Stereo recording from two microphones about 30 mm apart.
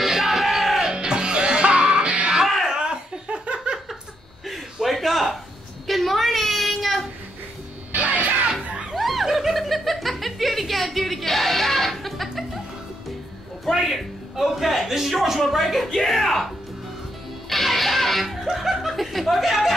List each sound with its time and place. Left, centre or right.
0.0 s music: centre
0.9 s music: right
2.8 s laughter: right
4.9 s a sound: centre
6.7 s child singing: centre
7.9 s music: right
8.9 s snicker: centre
13.7 s a sound: centre
16.1 s music: centre
17.5 s music: centre